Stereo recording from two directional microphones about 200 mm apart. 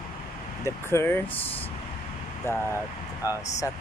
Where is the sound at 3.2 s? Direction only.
15° left (ahead or behind).